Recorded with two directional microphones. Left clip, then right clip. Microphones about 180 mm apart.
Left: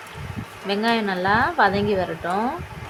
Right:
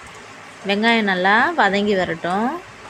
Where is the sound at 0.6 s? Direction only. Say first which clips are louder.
Right 5 dB; 15° right (ahead or behind).